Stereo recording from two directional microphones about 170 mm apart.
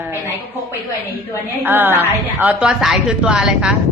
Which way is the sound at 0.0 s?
15° right (ahead or behind).